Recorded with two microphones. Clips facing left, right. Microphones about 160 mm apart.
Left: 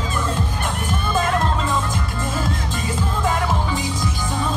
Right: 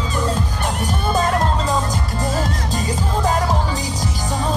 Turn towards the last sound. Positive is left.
turn(degrees=-40)  # may be behind; listen again after turning